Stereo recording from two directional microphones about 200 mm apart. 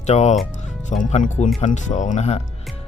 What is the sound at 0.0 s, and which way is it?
Speech, 35° left (ahead or behind).